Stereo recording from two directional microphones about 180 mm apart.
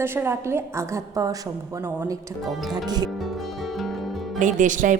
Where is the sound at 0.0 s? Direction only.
15° right (ahead or behind).